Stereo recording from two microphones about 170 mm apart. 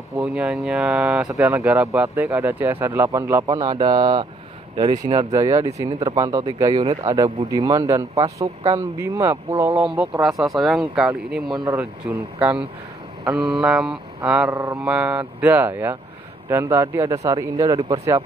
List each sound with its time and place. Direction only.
0.2 s speech: 5° right (ahead or behind)
1.3 s speech: 15° right (ahead or behind)
11.5 s speech: 25° right (ahead or behind)
11.8 s speech: 10° right (ahead or behind)
14.5 s speech: 20° right (ahead or behind)
14.8 s speech: 5° right (ahead or behind); by 17.9 s 20° right (ahead or behind)